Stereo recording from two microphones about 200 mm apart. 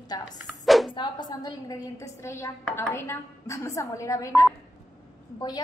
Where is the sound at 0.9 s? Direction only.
20° left (ahead or behind).